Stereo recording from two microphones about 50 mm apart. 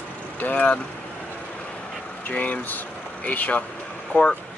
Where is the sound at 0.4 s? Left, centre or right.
Left.